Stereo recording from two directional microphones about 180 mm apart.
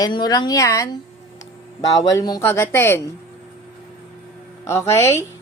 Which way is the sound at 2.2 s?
20° left (ahead or behind).